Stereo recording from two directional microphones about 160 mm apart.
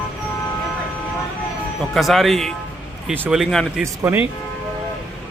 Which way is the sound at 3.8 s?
15° right (ahead or behind).